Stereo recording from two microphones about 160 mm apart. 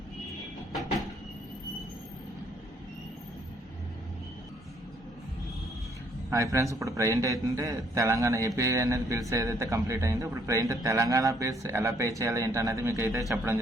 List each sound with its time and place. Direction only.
6.3 s a man's voice: 20° right (ahead or behind)